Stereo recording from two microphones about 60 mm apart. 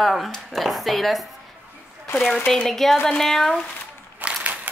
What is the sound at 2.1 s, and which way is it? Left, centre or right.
Speech, left.